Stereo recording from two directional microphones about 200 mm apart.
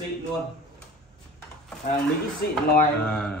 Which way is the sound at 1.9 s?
50° left (ahead or behind).